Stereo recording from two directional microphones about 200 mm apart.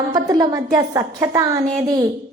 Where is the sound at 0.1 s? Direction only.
20° right (ahead or behind).